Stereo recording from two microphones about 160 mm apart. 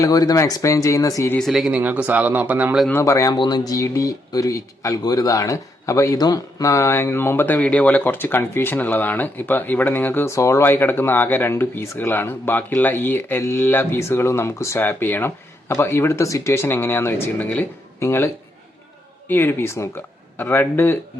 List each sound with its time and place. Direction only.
0.0 s speech: 25° left (ahead or behind)
1.4 s speech: centre (ahead or behind)
2.9 s speech: 20° left (ahead or behind)
19.3 s speech: 15° left (ahead or behind)